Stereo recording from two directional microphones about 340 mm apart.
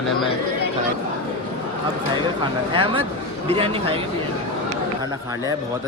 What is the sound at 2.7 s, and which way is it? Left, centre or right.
Speech, centre.